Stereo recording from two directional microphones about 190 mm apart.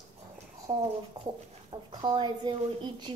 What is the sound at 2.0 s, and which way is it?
A woman's voice, 25° right (ahead or behind).